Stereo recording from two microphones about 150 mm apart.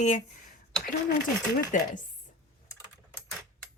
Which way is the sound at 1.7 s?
60° left (ahead or behind).